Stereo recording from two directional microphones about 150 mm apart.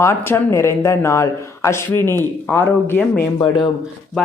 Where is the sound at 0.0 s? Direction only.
15° left (ahead or behind).